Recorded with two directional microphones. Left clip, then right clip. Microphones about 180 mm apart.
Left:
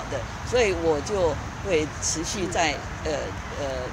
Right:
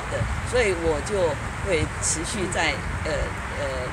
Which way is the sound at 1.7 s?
45° left (ahead or behind).